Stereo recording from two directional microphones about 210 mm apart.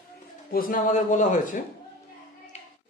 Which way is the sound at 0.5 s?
40° left (ahead or behind).